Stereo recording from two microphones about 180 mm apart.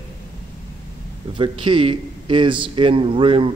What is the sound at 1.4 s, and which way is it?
A man's voice, 25° right (ahead or behind).